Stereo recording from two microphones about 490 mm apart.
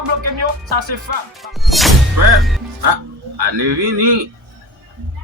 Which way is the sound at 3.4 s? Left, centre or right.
Right.